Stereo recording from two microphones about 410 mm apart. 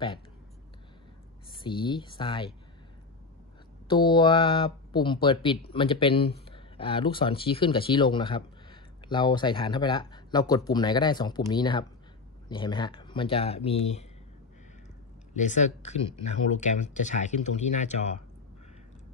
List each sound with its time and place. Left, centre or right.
1.6 s speech: centre
3.8 s speech: centre
15.3 s speech: centre